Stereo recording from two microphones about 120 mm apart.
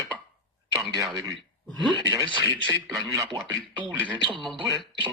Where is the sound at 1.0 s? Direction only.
30° right (ahead or behind).